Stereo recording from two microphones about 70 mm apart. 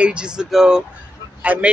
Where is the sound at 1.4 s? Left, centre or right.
Right.